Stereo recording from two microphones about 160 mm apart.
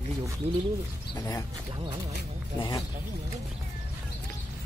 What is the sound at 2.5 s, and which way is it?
Speech, 25° left (ahead or behind).